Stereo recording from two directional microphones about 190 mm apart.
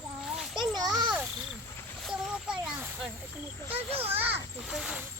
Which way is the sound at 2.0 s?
Centre (ahead or behind).